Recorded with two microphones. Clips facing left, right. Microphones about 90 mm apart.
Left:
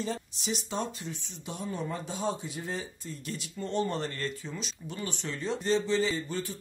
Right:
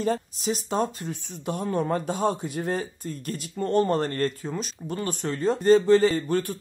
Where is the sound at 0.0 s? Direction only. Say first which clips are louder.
Right 8 dB; 45° right (ahead or behind).